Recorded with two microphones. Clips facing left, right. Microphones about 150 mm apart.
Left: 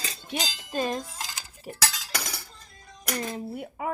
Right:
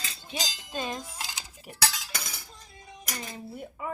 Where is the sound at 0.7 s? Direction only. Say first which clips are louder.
Left 5 dB; 45° left (ahead or behind).